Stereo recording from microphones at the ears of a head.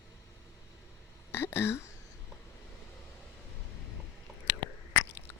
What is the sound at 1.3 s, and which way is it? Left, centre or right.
Speech, left.